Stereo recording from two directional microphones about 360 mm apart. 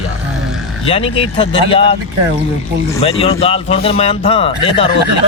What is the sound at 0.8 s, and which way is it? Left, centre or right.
A man's voice, centre.